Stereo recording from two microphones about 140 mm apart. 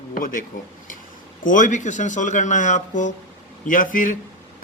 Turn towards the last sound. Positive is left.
turn(degrees=70)  # may be behind; listen again after turning